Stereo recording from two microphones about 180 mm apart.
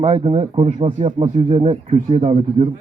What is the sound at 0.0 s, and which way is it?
Speech, 35° right (ahead or behind).